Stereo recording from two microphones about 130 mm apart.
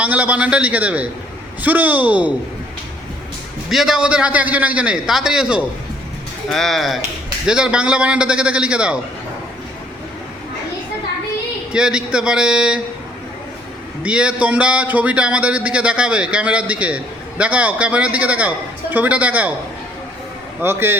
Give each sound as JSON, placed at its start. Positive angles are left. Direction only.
{"t": 0.0, "sound": "a man's voice", "side_deg": -10}
{"t": 3.7, "sound": "a man's voice", "side_deg": -5}
{"t": 11.7, "sound": "a man's voice", "side_deg": -5}
{"t": 14.0, "sound": "a man's voice", "side_deg": -10}
{"t": 20.6, "sound": "a man's voice", "side_deg": -15}